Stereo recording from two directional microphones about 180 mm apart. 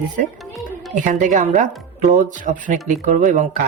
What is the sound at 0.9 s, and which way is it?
Speech, 45° right (ahead or behind).